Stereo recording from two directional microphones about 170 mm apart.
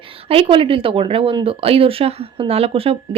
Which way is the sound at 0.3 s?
35° right (ahead or behind).